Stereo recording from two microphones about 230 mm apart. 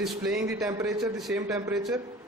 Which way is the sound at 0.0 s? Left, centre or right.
Centre.